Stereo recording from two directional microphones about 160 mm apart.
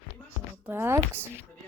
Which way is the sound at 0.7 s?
15° right (ahead or behind).